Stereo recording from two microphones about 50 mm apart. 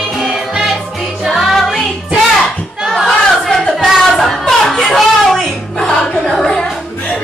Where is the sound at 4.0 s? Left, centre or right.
Centre.